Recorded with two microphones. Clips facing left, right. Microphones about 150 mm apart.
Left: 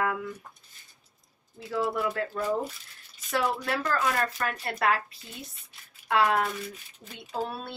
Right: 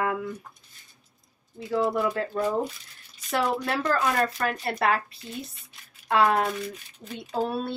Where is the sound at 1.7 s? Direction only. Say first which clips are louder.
Right 4 dB; 30° right (ahead or behind).